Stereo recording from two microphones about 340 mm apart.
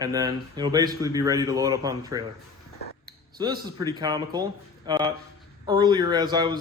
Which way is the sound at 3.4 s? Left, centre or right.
Centre.